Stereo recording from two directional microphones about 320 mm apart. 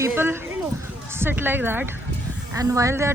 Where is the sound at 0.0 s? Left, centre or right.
Centre.